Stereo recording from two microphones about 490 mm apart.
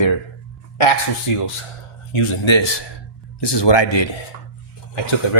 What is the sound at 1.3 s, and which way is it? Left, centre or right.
Speech, left.